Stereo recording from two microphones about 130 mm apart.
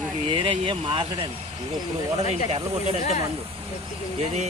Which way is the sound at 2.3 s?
55° right (ahead or behind).